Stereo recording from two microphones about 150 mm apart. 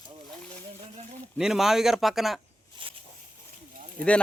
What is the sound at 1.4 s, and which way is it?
Speech, 5° right (ahead or behind).